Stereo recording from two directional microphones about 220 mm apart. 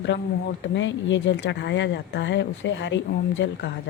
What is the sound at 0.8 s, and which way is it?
Speech, 55° left (ahead or behind).